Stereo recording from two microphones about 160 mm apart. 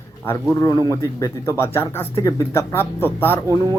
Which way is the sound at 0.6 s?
20° left (ahead or behind).